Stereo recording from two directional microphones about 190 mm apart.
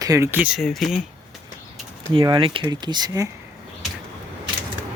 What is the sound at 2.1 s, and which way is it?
Speech, 25° right (ahead or behind).